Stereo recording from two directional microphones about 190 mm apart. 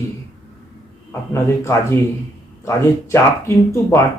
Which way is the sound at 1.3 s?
15° left (ahead or behind).